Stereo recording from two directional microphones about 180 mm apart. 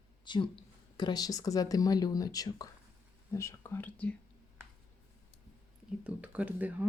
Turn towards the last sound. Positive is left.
turn(degrees=-10)  # may be behind; listen again after turning